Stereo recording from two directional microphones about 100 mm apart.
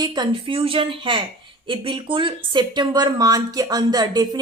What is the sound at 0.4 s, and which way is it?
A woman's voice, 60° right (ahead or behind).